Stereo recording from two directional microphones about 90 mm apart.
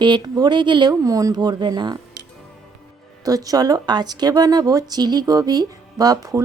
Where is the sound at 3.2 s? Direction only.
40° right (ahead or behind).